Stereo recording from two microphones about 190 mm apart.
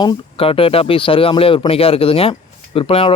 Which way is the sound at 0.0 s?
25° left (ahead or behind).